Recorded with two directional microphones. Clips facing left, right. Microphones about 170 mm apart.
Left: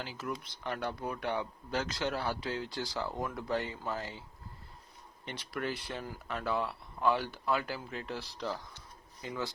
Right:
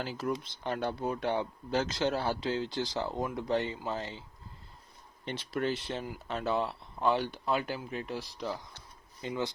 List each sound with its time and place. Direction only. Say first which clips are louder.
0.0 s speech: right 5 dB; 45° right (ahead or behind)
0.4 s speech: right 3 dB; 25° right (ahead or behind)
5.2 s speech: right 5 dB; 25° right (ahead or behind)